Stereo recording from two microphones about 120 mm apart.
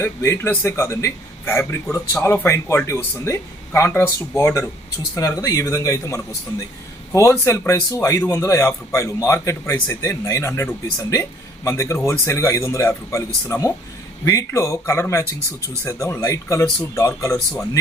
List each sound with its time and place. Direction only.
0.0 s a man's voice: 20° left (ahead or behind)